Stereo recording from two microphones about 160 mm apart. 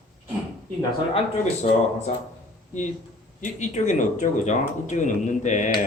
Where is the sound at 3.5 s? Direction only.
50° left (ahead or behind).